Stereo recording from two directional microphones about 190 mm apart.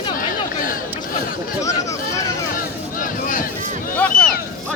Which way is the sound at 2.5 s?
45° left (ahead or behind).